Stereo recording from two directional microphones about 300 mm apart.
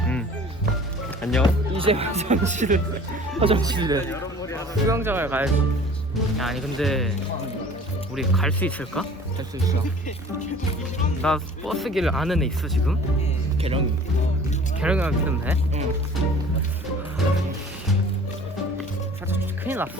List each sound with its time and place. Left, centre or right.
1.2 s speech: centre
1.7 s a man's voice: centre
4.1 s a sound: centre
4.9 s a man's voice: centre
8.1 s speech: centre
11.2 s speech: centre
13.6 s speech: centre
14.8 s speech: centre
19.3 s music: centre